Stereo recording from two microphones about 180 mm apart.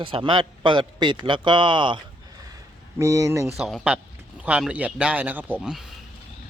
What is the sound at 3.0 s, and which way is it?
Speech, 20° right (ahead or behind).